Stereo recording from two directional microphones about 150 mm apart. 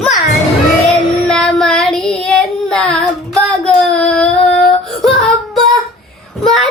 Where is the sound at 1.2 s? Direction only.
5° left (ahead or behind).